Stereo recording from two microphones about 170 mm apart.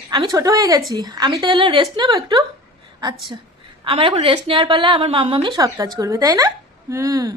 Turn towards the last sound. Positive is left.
turn(degrees=-20)  # may be behind; listen again after turning